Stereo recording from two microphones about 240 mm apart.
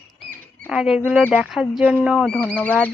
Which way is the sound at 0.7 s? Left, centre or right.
Centre.